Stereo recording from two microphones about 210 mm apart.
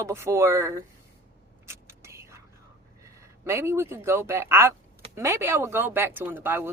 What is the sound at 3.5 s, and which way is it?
Speech, 15° right (ahead or behind).